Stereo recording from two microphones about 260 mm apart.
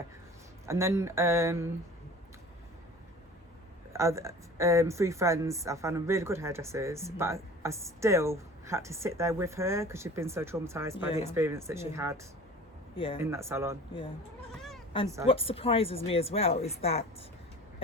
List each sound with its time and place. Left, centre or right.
0.6 s speech: centre
3.9 s speech: centre
13.2 s speech: centre
15.0 s speech: centre
15.3 s a woman's voice: left